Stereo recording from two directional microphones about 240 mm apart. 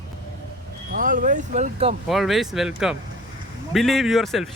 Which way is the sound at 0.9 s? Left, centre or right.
Right.